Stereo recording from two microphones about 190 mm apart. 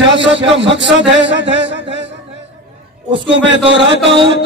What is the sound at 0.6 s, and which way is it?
Speech, 75° right (ahead or behind).